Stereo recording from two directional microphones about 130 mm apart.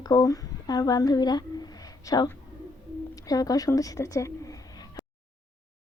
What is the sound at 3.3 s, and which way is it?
A woman's voice, 30° left (ahead or behind).